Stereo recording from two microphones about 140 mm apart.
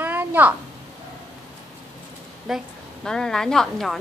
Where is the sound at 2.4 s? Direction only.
Centre (ahead or behind).